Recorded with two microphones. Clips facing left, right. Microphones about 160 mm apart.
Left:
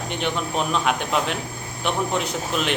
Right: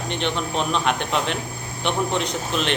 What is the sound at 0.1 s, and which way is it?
A man's voice, 10° left (ahead or behind).